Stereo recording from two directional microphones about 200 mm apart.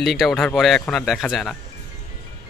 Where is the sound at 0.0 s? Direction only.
Centre (ahead or behind).